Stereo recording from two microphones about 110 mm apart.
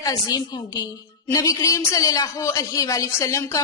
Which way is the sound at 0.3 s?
40° left (ahead or behind).